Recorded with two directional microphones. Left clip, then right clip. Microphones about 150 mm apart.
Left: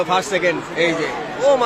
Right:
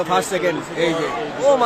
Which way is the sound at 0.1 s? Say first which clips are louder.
Left 1 dB; 25° right (ahead or behind).